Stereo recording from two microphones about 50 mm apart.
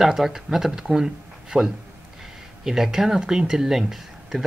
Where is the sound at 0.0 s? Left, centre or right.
Centre.